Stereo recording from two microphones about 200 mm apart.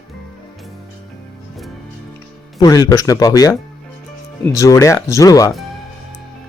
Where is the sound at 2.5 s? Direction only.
20° left (ahead or behind).